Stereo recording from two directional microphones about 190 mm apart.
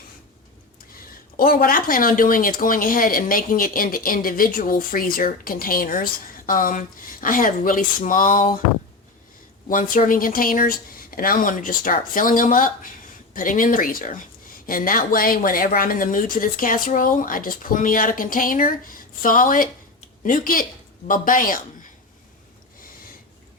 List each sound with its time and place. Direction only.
1.4 s speech: 50° left (ahead or behind)
9.6 s speech: 45° left (ahead or behind)